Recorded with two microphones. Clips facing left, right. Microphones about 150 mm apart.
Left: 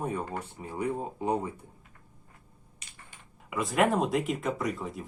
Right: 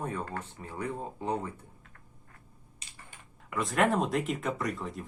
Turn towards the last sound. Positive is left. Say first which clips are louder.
# left 2 dB
turn(degrees=0)  # may be behind; listen again after turning